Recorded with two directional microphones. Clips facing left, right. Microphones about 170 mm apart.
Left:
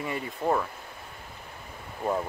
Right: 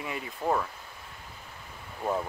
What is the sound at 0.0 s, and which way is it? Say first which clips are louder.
Speech: left 3 dB; centre (ahead or behind).